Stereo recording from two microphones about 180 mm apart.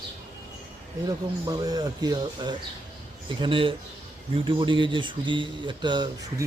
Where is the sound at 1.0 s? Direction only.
20° right (ahead or behind).